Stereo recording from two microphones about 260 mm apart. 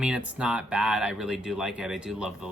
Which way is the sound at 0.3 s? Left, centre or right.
Centre.